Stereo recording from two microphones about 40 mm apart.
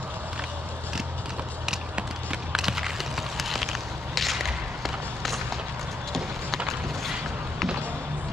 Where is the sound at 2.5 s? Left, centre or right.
Centre.